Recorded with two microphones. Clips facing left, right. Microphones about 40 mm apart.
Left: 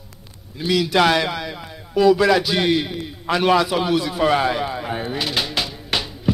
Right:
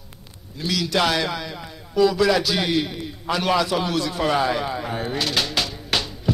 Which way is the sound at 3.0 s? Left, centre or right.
Centre.